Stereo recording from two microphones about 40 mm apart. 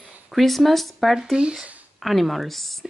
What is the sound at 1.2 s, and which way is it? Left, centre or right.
Speech, centre.